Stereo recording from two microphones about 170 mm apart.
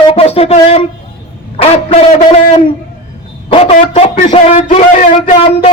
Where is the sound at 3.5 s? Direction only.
30° left (ahead or behind).